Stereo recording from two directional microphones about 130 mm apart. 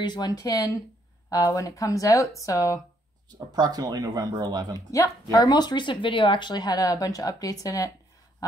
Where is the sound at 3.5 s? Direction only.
30° right (ahead or behind).